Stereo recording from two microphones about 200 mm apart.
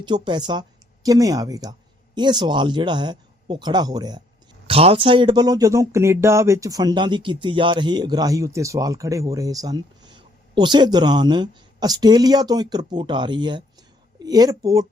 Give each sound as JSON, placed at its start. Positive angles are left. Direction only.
{"t": 0.0, "sound": "speech", "side_deg": -20}